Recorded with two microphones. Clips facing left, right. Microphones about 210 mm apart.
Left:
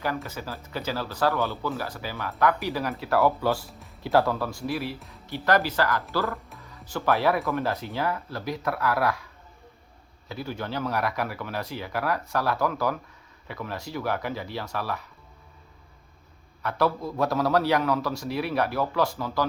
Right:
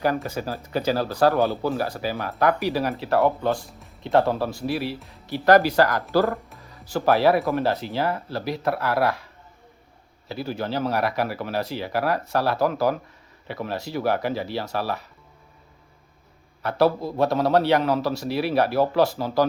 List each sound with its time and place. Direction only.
0.4 s speech: 40° right (ahead or behind)
3.5 s speech: 5° left (ahead or behind)
4.2 s a man's voice: 30° right (ahead or behind)
4.9 s speech: centre (ahead or behind)
5.3 s speech: 35° right (ahead or behind)
6.9 s speech: 35° right (ahead or behind)
10.2 s speech: 30° right (ahead or behind)
16.6 s a man's voice: 35° right (ahead or behind)